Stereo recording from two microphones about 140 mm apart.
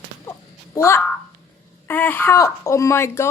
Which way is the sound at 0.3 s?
20° left (ahead or behind).